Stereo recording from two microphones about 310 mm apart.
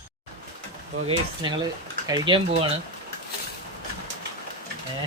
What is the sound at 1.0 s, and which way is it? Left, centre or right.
Speech, centre.